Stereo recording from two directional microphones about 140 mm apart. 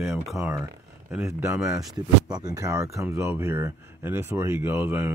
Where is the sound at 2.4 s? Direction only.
25° right (ahead or behind).